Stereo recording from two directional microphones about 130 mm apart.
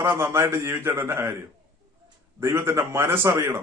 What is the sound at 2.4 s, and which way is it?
A man's voice, 20° right (ahead or behind).